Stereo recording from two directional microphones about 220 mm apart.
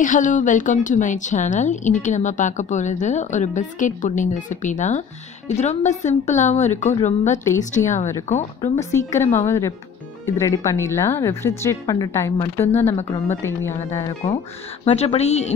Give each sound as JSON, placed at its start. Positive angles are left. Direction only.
{"t": 0.0, "sound": "a woman's voice", "side_deg": 35}
{"t": 8.5, "sound": "a woman's voice", "side_deg": 15}
{"t": 14.9, "sound": "a woman's voice", "side_deg": 30}